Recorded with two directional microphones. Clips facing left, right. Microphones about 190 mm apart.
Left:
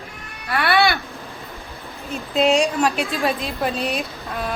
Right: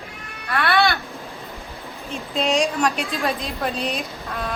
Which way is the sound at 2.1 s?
5° left (ahead or behind).